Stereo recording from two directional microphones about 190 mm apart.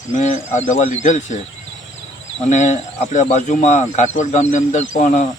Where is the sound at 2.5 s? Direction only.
40° left (ahead or behind).